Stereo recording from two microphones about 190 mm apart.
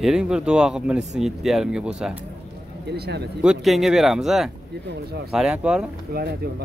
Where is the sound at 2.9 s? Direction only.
60° right (ahead or behind).